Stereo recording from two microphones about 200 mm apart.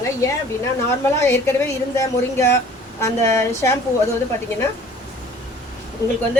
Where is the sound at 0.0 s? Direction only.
15° left (ahead or behind).